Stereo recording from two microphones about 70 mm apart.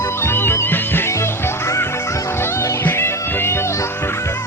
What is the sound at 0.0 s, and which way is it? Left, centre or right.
Music, left.